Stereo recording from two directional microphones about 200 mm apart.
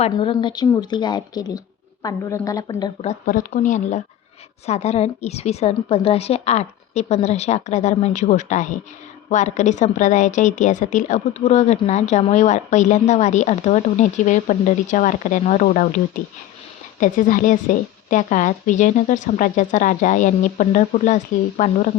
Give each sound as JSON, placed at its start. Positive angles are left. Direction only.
{"t": 0.1, "sound": "speech", "side_deg": 25}
{"t": 3.0, "sound": "a woman's voice", "side_deg": 40}